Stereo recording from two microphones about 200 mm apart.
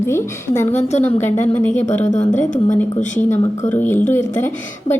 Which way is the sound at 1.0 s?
10° left (ahead or behind).